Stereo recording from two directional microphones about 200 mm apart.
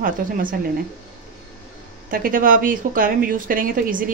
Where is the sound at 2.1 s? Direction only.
45° right (ahead or behind).